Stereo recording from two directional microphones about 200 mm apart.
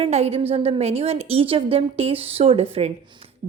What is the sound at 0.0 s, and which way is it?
A woman's voice, 30° right (ahead or behind).